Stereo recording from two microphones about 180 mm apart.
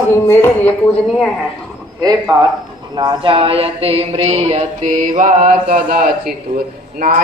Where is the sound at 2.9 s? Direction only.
25° right (ahead or behind); by 6.1 s 45° right (ahead or behind).